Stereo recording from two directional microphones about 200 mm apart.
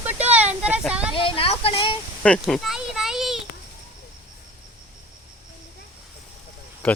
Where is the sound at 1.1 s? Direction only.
25° left (ahead or behind).